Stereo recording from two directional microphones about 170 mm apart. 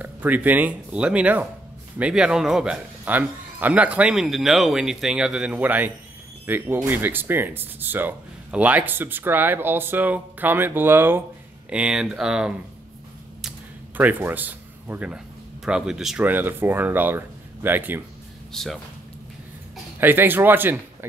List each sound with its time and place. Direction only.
0.0 s speech: 10° right (ahead or behind)
13.9 s speech: 10° right (ahead or behind)
18.5 s speech: centre (ahead or behind)
20.0 s speech: 10° right (ahead or behind)